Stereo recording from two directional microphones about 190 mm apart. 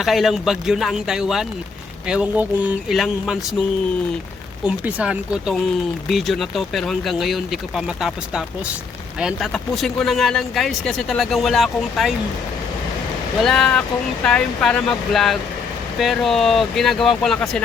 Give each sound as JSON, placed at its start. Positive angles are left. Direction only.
{"t": 0.0, "sound": "speech", "side_deg": 0}
{"t": 4.6, "sound": "speech", "side_deg": -10}
{"t": 13.4, "sound": "speech", "side_deg": 5}